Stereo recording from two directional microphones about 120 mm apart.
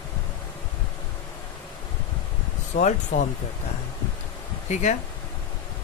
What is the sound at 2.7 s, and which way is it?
Speech, 90° left.